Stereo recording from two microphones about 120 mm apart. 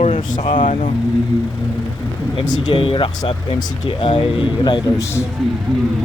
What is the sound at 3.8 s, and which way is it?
Speech, 50° left (ahead or behind).